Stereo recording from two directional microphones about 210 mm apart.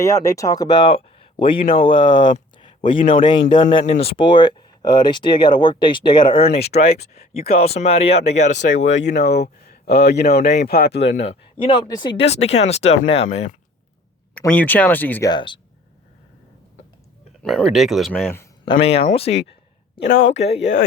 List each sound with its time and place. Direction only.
0.0 s speech: 15° left (ahead or behind); by 8.4 s 30° left (ahead or behind)
8.9 s speech: 60° left (ahead or behind)
11.3 s speech: 25° left (ahead or behind)
14.3 s speech: 5° left (ahead or behind)
15.3 s speech: 20° left (ahead or behind)
17.4 s speech: centre (ahead or behind)
18.6 s speech: 25° left (ahead or behind)